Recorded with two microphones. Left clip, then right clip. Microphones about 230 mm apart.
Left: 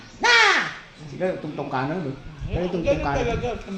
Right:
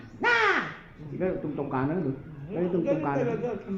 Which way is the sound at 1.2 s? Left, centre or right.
Left.